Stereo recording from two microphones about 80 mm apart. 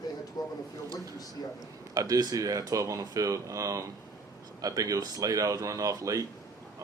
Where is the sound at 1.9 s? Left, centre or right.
Right.